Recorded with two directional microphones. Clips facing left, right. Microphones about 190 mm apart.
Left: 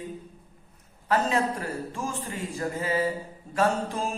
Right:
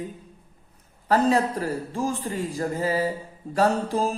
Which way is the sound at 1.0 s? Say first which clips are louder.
Right 4 dB; 35° right (ahead or behind).